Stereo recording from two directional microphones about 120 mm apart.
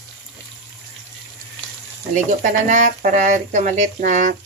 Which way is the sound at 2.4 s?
90° right.